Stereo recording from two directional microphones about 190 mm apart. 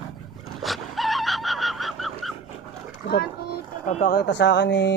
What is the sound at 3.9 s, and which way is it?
Speech, 40° left (ahead or behind).